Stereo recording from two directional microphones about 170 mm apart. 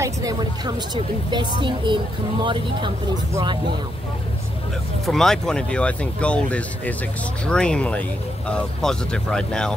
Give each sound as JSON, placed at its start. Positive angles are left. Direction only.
{"t": 0.0, "sound": "a woman's voice", "side_deg": -20}
{"t": 5.0, "sound": "speech", "side_deg": 0}